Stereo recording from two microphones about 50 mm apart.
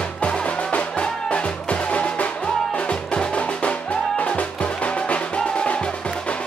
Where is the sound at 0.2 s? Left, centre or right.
Left.